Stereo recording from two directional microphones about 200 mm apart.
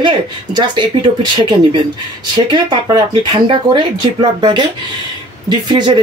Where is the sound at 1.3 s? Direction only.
25° right (ahead or behind).